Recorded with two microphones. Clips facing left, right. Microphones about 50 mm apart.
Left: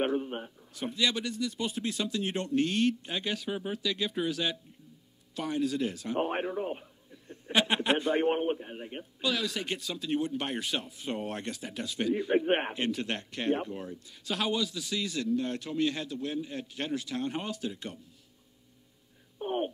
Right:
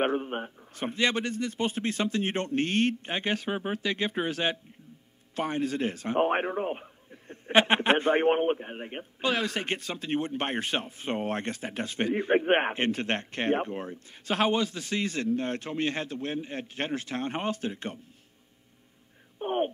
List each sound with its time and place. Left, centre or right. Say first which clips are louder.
0.0 s a man's voice: right 2 dB; right
19.4 s speech: right 3 dB; right